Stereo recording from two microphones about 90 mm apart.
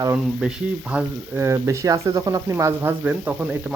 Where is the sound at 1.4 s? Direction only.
30° right (ahead or behind).